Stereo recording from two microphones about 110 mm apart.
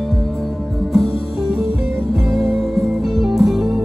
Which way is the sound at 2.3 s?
Centre (ahead or behind).